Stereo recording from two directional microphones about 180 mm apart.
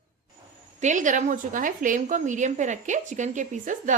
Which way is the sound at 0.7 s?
45° right (ahead or behind).